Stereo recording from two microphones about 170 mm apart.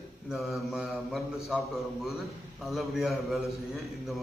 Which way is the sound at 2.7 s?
Centre (ahead or behind).